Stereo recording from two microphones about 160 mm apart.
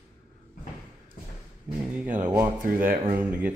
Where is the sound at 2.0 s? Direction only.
55° right (ahead or behind).